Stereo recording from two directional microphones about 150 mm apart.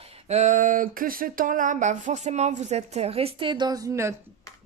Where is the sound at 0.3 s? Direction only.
50° right (ahead or behind); by 4.1 s 20° right (ahead or behind).